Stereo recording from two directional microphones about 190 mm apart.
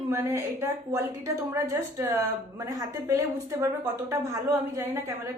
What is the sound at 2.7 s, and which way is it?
A woman's voice, 15° right (ahead or behind).